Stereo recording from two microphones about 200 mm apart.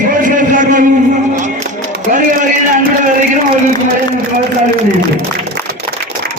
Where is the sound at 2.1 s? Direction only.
40° right (ahead or behind).